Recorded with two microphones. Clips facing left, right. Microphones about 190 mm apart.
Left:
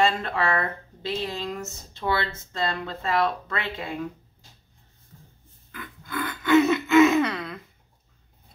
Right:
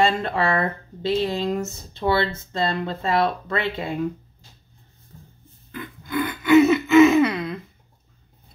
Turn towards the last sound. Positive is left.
turn(degrees=-10)  # may be behind; listen again after turning